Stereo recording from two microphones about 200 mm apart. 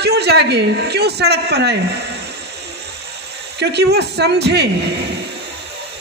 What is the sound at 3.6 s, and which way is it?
A woman's voice, 55° right (ahead or behind).